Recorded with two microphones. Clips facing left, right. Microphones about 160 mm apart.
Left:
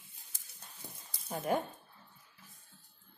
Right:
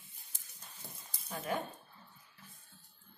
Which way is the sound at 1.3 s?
45° left (ahead or behind).